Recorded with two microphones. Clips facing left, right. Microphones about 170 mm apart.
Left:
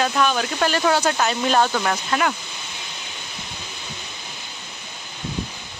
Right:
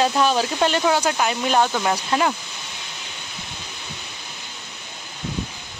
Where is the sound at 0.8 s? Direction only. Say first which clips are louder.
Even; 10° right (ahead or behind).